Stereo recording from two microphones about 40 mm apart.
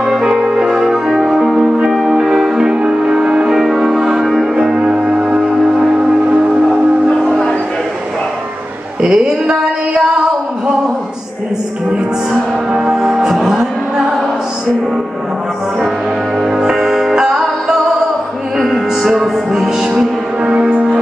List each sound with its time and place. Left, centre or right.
0.0 s music: centre
9.0 s a sound: centre
12.3 s music: centre
16.3 s music: centre
19.8 s music: centre